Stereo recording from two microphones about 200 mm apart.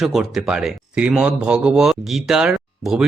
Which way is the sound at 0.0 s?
Centre (ahead or behind).